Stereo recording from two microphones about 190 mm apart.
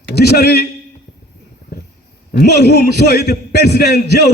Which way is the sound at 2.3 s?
55° left (ahead or behind).